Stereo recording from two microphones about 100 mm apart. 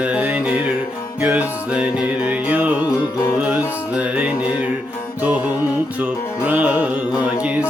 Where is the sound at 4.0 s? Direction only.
15° right (ahead or behind).